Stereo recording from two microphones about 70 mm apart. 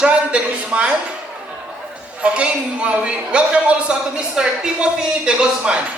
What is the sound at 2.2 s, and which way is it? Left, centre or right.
A man's voice, centre.